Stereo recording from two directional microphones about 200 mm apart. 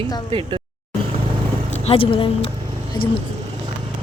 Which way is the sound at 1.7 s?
35° left (ahead or behind).